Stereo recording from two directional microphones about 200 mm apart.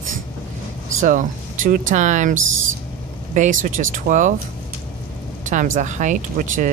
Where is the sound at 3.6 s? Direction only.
40° right (ahead or behind).